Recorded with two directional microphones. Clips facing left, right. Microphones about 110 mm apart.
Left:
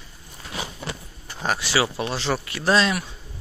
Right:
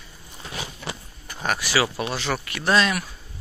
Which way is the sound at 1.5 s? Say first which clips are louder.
Even; 25° left (ahead or behind).